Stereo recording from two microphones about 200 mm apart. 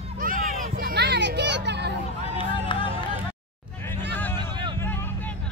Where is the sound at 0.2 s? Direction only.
45° right (ahead or behind).